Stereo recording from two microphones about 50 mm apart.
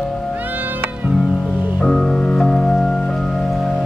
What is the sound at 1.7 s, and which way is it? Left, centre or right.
Music, centre.